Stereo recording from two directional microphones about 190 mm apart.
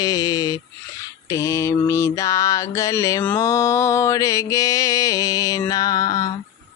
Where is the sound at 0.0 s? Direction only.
20° left (ahead or behind).